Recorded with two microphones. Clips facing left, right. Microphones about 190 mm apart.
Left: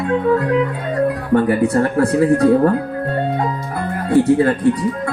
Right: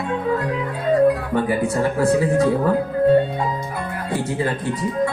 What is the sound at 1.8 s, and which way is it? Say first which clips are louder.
Speech: left 1 dB; 65° left (ahead or behind).